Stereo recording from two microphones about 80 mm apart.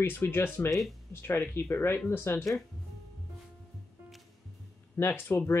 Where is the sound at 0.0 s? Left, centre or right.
Left.